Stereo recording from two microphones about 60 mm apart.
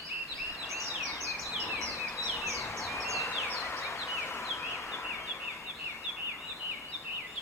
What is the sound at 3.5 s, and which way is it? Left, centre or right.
Bird, left.